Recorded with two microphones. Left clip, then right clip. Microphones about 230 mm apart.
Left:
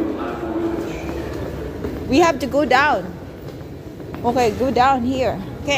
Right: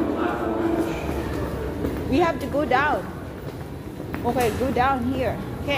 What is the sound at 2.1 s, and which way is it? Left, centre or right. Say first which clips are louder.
Speech: left 7 dB; left.